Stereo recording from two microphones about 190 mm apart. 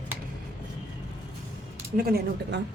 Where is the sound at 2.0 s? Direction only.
55° right (ahead or behind).